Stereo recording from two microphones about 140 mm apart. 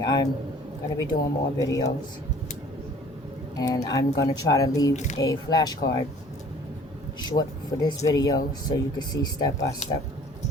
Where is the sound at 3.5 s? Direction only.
25° left (ahead or behind).